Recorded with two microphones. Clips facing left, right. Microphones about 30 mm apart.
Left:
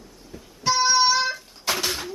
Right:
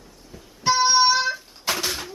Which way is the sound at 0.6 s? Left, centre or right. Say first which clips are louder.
Right 2 dB; centre.